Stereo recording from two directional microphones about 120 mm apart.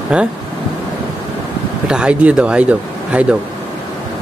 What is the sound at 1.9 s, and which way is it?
Speech, 10° right (ahead or behind).